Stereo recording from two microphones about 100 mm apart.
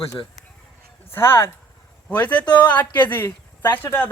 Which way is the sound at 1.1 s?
25° left (ahead or behind).